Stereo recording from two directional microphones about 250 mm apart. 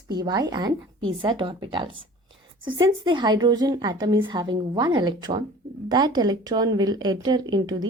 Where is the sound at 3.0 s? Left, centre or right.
Centre.